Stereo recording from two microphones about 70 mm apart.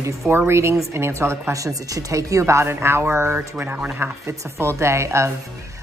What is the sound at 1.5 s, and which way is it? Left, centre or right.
Speech, right.